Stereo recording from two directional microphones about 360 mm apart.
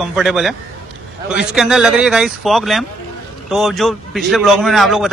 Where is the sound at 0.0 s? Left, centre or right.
Centre.